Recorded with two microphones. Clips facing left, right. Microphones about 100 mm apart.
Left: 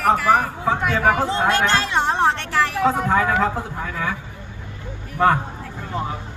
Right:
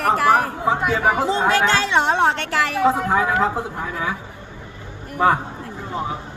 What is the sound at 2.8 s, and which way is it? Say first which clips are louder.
A woman's voice: right 2 dB; 5° right (ahead or behind).